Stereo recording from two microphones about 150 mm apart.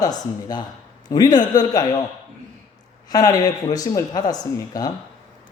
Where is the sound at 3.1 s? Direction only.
25° left (ahead or behind).